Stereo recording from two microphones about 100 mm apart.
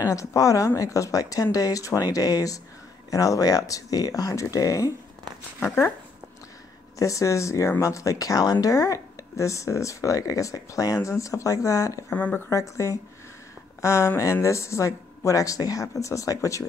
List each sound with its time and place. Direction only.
0.0 s speech: 35° left (ahead or behind)
5.6 s speech: 15° left (ahead or behind)
7.0 s speech: 35° left (ahead or behind)
12.1 s speech: 20° left (ahead or behind)
12.4 s speech: 30° left (ahead or behind)